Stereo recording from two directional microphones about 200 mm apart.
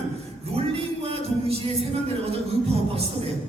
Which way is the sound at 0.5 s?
30° right (ahead or behind).